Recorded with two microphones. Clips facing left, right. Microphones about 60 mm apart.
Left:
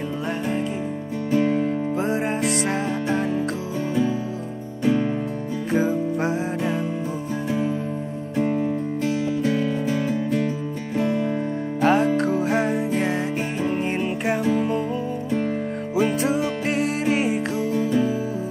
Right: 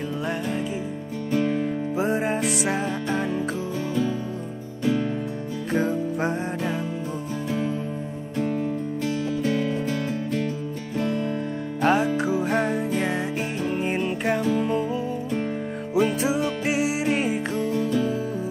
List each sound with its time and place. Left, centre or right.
1.3 s music: centre
2.0 s music: centre
4.8 s music: centre
5.7 s music: centre
8.4 s music: centre
11.0 s music: left
11.8 s music: centre
15.9 s music: centre